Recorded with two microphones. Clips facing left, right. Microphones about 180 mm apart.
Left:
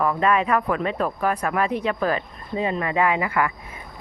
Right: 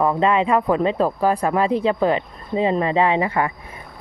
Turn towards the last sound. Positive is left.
turn(degrees=-30)  # may be behind; listen again after turning